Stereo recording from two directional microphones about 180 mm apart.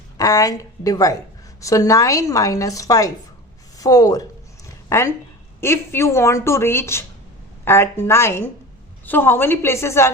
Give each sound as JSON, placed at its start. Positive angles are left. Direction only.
{"t": 0.2, "sound": "a woman's voice", "side_deg": 20}